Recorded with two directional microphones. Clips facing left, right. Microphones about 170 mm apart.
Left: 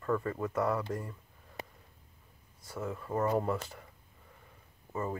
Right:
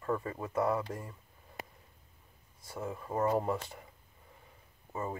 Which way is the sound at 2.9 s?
15° right (ahead or behind).